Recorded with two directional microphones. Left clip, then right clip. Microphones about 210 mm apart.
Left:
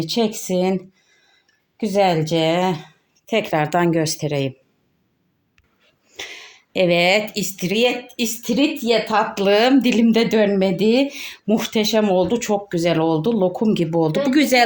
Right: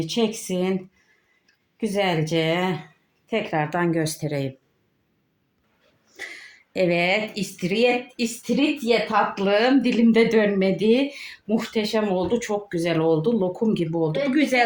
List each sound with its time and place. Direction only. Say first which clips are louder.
0.0 s speech: left 3 dB; 40° left (ahead or behind)
1.8 s speech: left 6 dB; 40° left (ahead or behind)
4.2 s speech: left 5 dB; 25° left (ahead or behind)
6.1 s a sound: left 3 dB; 20° left (ahead or behind)
6.8 s speech: left 5 dB; 45° left (ahead or behind)